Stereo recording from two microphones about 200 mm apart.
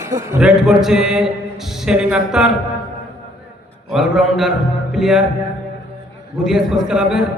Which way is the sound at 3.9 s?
Centre (ahead or behind).